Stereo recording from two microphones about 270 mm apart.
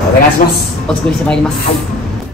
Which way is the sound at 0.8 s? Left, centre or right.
Centre.